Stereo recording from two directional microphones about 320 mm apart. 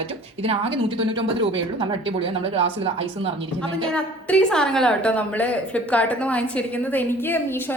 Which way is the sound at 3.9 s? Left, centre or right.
Centre.